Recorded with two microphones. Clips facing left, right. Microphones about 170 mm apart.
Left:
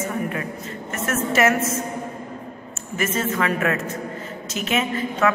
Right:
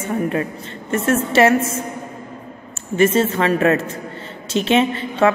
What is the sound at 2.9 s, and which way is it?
A woman's voice, 30° right (ahead or behind).